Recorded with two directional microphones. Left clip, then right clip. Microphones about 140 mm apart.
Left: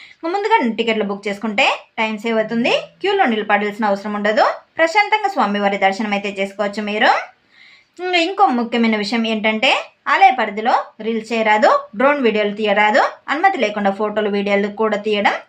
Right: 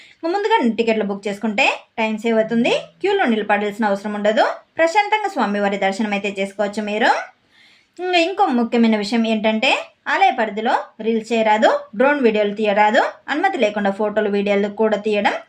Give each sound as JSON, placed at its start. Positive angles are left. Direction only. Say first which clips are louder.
{"t": 0.2, "sound": "a woman's voice", "louder": "left 1 dB", "side_deg": -45}